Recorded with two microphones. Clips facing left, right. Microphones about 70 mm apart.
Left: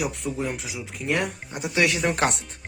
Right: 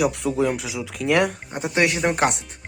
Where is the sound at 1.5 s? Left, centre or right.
Right.